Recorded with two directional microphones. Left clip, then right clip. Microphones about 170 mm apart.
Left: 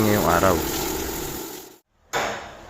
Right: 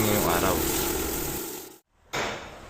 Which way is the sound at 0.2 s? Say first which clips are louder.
Left 5 dB; 35° left (ahead or behind).